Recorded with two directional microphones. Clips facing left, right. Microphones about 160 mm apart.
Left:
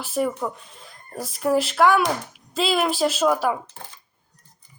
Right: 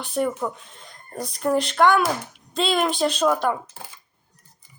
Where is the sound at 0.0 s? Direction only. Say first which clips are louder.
Even; centre (ahead or behind).